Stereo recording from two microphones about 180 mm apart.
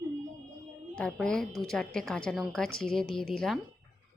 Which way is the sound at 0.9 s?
5° left (ahead or behind).